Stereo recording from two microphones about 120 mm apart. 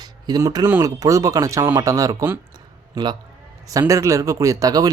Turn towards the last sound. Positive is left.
turn(degrees=-30)  # may be behind; listen again after turning